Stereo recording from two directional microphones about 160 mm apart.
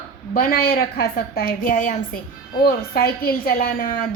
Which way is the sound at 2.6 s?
70° left (ahead or behind).